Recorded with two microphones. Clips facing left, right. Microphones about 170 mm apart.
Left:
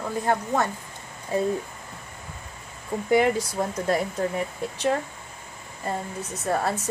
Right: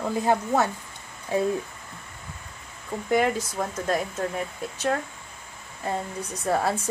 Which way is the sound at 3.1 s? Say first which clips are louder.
Left 2 dB; 10° left (ahead or behind).